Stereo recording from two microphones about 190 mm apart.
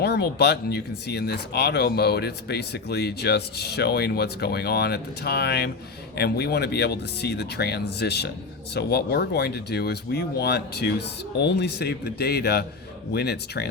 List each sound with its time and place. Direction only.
0.0 s speech: 60° left (ahead or behind)